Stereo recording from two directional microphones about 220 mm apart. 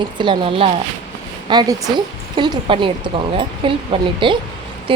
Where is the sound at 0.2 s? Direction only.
25° right (ahead or behind).